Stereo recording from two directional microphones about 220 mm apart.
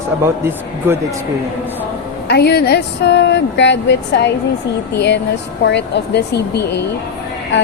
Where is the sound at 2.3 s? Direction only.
45° left (ahead or behind).